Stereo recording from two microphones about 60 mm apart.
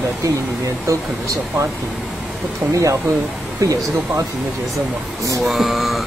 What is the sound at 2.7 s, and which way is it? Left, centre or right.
Speech, right.